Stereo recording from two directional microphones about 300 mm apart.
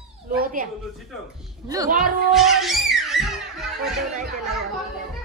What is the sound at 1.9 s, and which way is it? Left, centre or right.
Music, centre.